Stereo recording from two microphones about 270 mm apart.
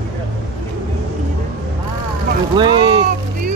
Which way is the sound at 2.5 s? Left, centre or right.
Centre.